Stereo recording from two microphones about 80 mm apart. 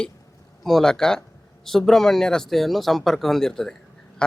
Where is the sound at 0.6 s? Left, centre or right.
Centre.